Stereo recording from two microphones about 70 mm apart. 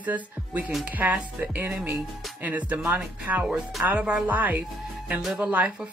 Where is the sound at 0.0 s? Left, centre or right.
Right.